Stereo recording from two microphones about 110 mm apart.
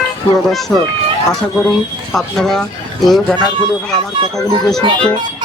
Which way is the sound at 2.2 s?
5° left (ahead or behind).